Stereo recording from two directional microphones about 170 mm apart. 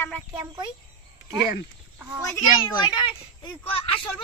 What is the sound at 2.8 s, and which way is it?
Speech, 25° left (ahead or behind).